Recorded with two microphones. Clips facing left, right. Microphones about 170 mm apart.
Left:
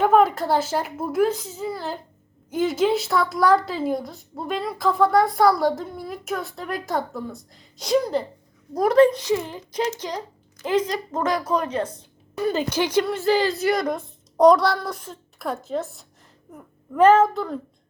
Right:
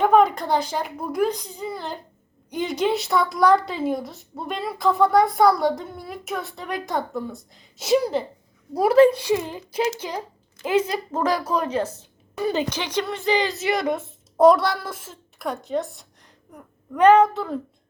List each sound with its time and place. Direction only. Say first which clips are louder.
0.0 s a woman's voice: even; 5° left (ahead or behind)
12.7 s a woman's voice: left 5 dB; 10° left (ahead or behind)